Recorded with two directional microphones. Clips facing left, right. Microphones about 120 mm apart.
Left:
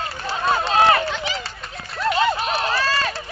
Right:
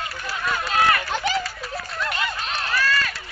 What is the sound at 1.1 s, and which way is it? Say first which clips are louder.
Run: right 3 dB; 45° right (ahead or behind).